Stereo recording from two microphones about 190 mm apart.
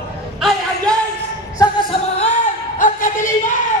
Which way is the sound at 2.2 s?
40° left (ahead or behind).